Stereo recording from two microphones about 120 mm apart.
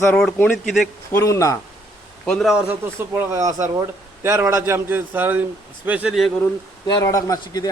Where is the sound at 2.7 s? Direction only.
20° right (ahead or behind).